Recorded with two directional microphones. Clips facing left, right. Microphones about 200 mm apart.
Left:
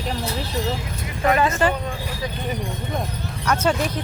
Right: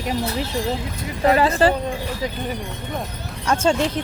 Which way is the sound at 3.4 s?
30° right (ahead or behind).